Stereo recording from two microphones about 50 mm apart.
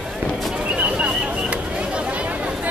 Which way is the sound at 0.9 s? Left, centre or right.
Right.